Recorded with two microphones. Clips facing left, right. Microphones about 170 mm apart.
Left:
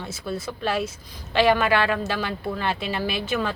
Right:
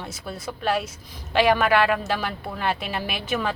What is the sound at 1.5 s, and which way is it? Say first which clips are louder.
Speech: right 3 dB; 10° right (ahead or behind).